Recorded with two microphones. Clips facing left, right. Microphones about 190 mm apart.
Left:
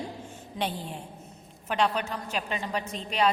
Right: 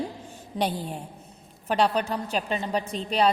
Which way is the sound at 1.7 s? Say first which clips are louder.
Right 4 dB; 35° right (ahead or behind).